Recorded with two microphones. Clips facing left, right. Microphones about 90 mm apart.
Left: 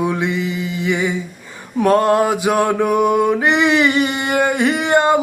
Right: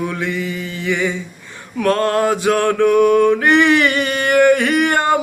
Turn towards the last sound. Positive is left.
turn(degrees=20)  # may be behind; listen again after turning